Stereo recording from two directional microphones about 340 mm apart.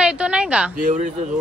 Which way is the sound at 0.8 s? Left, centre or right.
Right.